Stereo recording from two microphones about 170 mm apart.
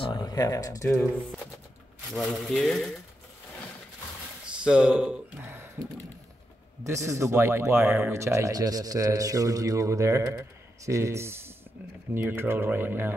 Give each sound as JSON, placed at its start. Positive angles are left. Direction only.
{"t": 0.0, "sound": "speech", "side_deg": 25}
{"t": 2.1, "sound": "speech", "side_deg": 0}
{"t": 4.6, "sound": "speech", "side_deg": -5}
{"t": 6.8, "sound": "speech", "side_deg": -20}